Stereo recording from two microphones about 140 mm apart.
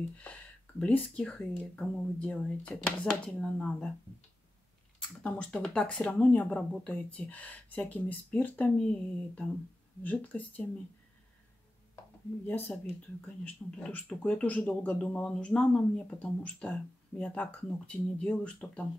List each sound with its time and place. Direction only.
0.2 s speech: 10° left (ahead or behind)
5.2 s speech: 5° left (ahead or behind)
12.4 s speech: 15° left (ahead or behind)